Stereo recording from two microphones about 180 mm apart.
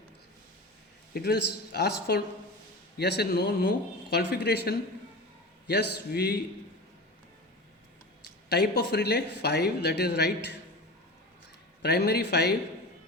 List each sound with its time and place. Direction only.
1.1 s speech: 60° left (ahead or behind)
8.4 s speech: 65° left (ahead or behind)
11.8 s speech: 65° left (ahead or behind)